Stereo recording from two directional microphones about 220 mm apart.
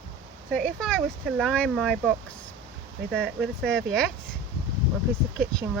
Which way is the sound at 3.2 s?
5° right (ahead or behind).